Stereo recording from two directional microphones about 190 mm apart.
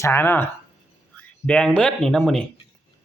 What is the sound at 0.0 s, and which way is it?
Speech, 10° left (ahead or behind).